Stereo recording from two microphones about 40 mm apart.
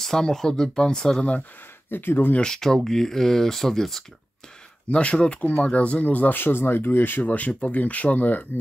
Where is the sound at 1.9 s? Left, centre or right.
Left.